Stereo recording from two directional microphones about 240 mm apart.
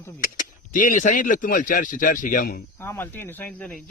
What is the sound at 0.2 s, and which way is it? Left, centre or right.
Speech, left.